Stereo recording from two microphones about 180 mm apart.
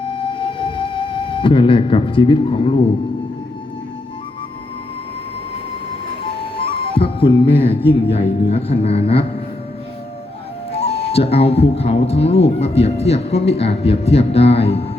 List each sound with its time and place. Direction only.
0.0 s music: 30° left (ahead or behind)
6.8 s speech: 30° left (ahead or behind)
10.7 s speech: 35° left (ahead or behind)